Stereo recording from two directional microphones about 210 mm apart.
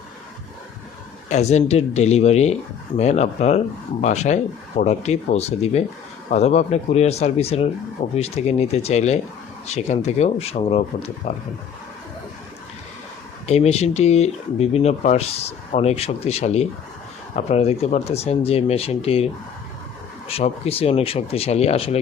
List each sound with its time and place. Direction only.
1.3 s speech: 30° left (ahead or behind)
13.5 s speech: 30° left (ahead or behind)